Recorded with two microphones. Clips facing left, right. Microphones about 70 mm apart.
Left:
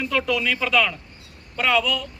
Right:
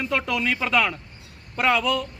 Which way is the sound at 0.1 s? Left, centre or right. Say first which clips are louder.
Left 2 dB; right.